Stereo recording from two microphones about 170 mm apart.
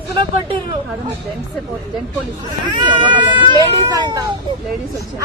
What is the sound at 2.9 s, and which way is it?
Speech, 30° right (ahead or behind).